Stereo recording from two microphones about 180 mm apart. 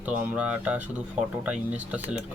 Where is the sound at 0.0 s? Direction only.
10° right (ahead or behind).